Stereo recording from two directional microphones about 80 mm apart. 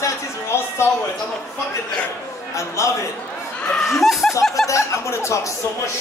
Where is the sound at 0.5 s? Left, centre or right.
Left.